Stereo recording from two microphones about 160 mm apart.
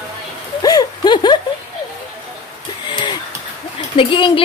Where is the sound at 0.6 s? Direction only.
25° left (ahead or behind).